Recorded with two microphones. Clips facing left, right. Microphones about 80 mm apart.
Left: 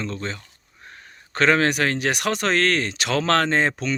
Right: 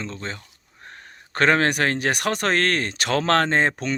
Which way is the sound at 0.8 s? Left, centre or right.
Right.